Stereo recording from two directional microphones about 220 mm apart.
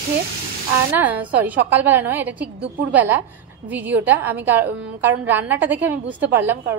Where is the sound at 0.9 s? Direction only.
10° right (ahead or behind).